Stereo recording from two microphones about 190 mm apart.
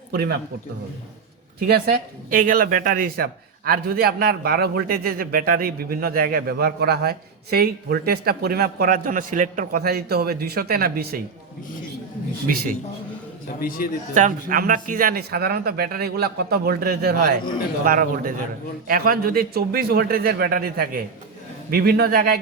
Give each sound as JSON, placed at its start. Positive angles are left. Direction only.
{"t": 0.1, "sound": "a man's voice", "side_deg": -60}
{"t": 1.6, "sound": "speech", "side_deg": -55}
{"t": 13.6, "sound": "a man's voice", "side_deg": 50}
{"t": 14.1, "sound": "speech", "side_deg": -40}